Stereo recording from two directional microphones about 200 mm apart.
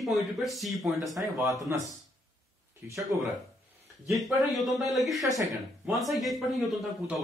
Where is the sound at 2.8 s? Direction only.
10° right (ahead or behind).